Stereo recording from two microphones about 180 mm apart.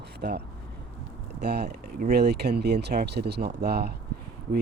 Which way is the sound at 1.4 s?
65° right (ahead or behind).